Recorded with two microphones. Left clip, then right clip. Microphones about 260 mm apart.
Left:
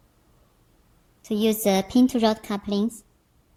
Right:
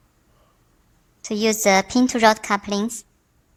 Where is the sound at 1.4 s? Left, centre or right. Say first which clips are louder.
Right 5 dB; centre.